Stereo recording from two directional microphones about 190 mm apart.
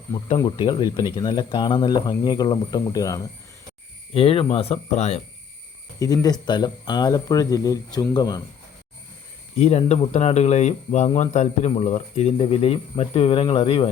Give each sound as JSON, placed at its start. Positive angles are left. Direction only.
{"t": 0.3, "sound": "speech", "side_deg": 25}
{"t": 4.1, "sound": "speech", "side_deg": 30}
{"t": 6.0, "sound": "speech", "side_deg": 20}
{"t": 9.6, "sound": "speech", "side_deg": 35}